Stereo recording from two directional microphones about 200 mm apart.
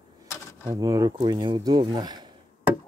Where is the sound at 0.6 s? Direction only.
15° right (ahead or behind).